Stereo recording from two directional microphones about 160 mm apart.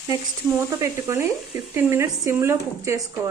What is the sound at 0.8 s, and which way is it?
A woman's voice, 15° right (ahead or behind).